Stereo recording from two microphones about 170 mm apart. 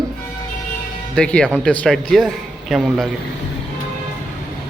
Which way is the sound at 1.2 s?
5° left (ahead or behind).